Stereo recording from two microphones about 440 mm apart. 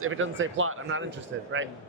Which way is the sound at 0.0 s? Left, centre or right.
Right.